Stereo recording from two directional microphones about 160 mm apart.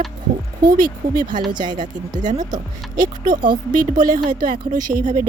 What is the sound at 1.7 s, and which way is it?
Speech, 55° right (ahead or behind).